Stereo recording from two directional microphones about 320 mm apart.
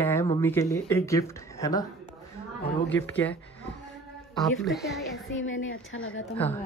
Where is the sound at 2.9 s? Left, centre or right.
Centre.